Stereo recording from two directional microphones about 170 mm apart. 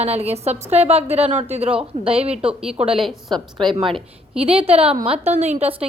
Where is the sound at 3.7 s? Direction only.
30° right (ahead or behind).